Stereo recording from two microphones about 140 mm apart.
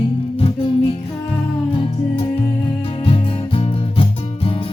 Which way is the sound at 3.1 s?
40° left (ahead or behind).